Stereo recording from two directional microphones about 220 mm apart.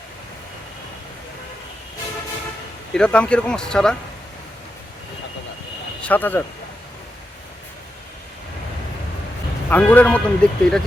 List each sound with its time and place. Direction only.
2.9 s speech: 5° left (ahead or behind)
6.0 s speech: 5° left (ahead or behind)
9.6 s a man's voice: 5° left (ahead or behind)